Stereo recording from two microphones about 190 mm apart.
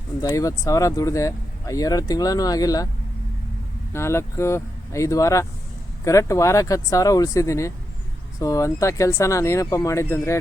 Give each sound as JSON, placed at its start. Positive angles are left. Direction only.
{"t": 0.2, "sound": "speech", "side_deg": 20}
{"t": 3.9, "sound": "speech", "side_deg": 15}